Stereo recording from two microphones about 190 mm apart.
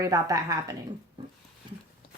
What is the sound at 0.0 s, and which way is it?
Speech, 15° right (ahead or behind).